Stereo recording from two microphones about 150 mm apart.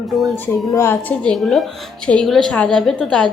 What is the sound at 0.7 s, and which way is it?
Speech, 20° left (ahead or behind).